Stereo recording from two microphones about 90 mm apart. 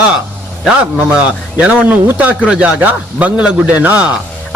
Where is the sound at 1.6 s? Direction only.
15° right (ahead or behind).